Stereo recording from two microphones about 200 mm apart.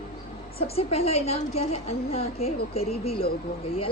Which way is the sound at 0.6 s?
30° left (ahead or behind).